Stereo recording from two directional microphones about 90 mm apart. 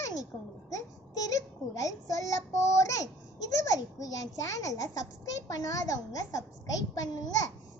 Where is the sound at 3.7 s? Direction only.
40° left (ahead or behind).